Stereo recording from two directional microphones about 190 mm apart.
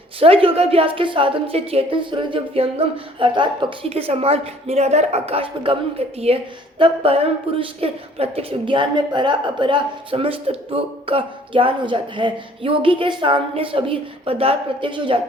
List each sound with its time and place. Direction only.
0.2 s speech: 30° right (ahead or behind)